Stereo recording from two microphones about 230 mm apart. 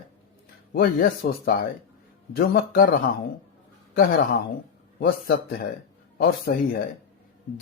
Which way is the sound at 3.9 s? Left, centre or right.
Left.